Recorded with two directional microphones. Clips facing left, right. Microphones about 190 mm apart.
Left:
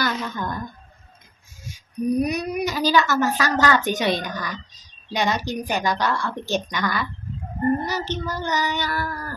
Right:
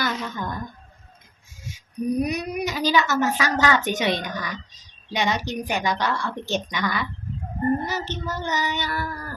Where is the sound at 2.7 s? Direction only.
20° right (ahead or behind).